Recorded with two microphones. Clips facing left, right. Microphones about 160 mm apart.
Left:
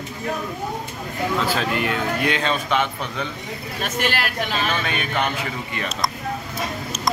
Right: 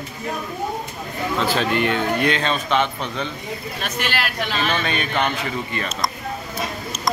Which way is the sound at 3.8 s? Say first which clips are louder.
Left 3 dB; 45° left (ahead or behind).